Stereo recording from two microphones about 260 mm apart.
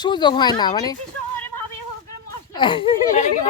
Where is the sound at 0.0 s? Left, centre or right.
Centre.